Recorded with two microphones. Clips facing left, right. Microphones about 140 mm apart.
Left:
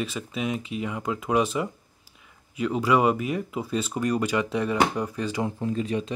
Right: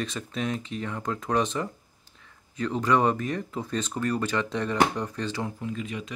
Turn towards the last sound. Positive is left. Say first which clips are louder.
# left 6 dB
turn(degrees=35)  # may be behind; listen again after turning